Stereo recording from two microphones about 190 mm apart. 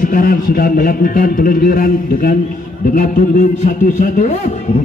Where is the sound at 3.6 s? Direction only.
40° left (ahead or behind).